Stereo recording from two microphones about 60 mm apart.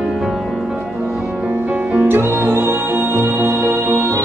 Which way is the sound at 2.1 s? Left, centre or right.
Right.